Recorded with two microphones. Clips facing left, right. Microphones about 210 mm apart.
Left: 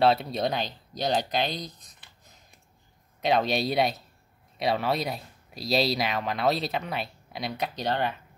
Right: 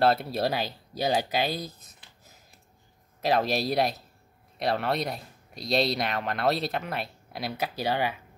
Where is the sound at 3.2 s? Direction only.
Centre (ahead or behind).